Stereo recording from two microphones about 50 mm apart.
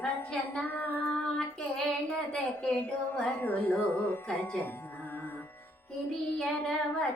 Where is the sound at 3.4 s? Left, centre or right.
Left.